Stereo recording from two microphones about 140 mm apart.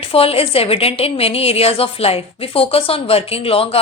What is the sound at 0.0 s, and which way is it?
A woman's voice, 45° left (ahead or behind).